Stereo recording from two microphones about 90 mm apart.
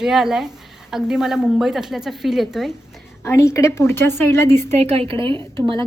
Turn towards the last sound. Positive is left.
turn(degrees=-60)  # may be behind; listen again after turning